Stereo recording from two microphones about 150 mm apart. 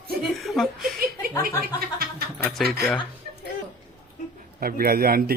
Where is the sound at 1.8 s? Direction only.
90° right.